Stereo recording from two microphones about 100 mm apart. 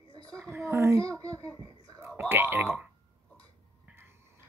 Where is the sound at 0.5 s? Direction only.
25° right (ahead or behind).